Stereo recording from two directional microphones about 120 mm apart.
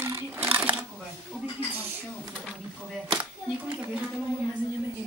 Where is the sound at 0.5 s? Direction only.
15° right (ahead or behind).